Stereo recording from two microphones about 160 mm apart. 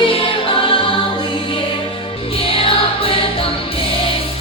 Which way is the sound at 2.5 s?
35° left (ahead or behind).